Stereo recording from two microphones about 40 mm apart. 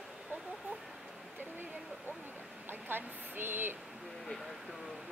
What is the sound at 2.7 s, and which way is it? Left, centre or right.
A woman's voice, right.